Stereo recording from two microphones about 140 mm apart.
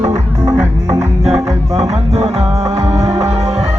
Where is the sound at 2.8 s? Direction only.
25° right (ahead or behind).